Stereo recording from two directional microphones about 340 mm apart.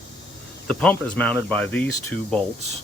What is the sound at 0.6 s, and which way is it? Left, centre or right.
Speech, centre.